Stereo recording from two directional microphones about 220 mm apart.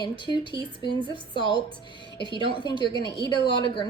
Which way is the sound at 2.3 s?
20° right (ahead or behind).